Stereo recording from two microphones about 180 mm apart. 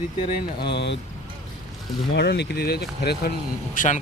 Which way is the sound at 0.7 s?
75° left (ahead or behind).